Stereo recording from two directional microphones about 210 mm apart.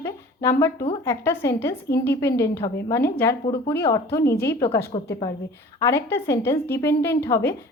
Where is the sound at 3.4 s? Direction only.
25° left (ahead or behind).